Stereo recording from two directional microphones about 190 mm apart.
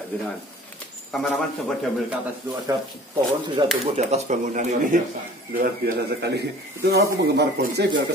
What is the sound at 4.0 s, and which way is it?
A man's voice, 35° right (ahead or behind).